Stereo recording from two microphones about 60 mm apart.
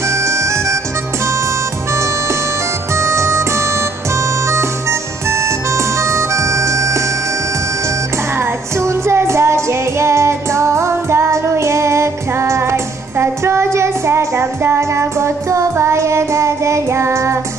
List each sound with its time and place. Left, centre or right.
0.1 s harmonica: right
3.0 s music: right
8.7 s music: right
15.8 s child singing: right